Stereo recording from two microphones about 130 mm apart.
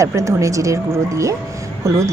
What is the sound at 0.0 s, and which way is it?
Speech, 25° right (ahead or behind).